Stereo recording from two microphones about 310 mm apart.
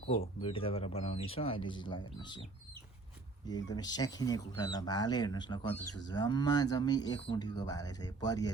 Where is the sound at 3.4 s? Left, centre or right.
Centre.